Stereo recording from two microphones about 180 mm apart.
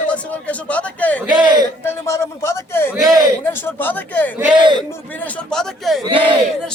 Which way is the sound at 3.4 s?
10° left (ahead or behind).